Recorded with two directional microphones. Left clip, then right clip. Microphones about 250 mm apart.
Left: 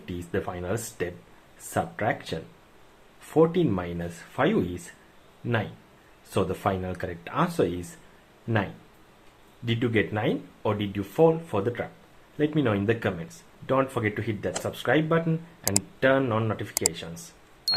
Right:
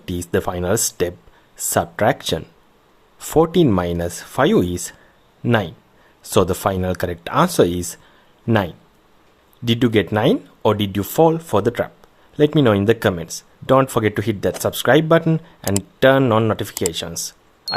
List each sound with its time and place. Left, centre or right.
0.0 s speech: right
9.6 s speech: right
17.7 s a sound: centre